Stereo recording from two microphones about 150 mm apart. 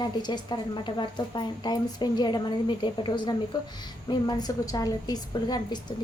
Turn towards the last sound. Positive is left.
turn(degrees=25)  # may be behind; listen again after turning